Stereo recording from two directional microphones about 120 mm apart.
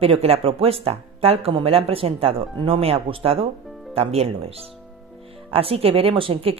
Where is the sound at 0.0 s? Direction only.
55° right (ahead or behind).